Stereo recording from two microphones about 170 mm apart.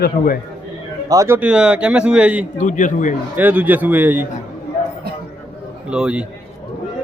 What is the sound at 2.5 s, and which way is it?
Speech, 50° left (ahead or behind).